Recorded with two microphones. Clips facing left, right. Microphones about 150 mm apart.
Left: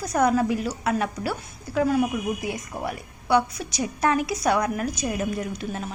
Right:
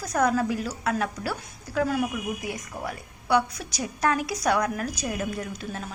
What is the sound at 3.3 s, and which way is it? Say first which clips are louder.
A woman's voice: left 3 dB; 5° left (ahead or behind).